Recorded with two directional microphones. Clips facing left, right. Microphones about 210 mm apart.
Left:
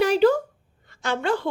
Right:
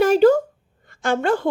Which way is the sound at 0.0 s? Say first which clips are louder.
Right 4 dB; 45° right (ahead or behind).